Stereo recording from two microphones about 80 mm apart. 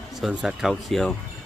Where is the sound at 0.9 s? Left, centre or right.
Centre.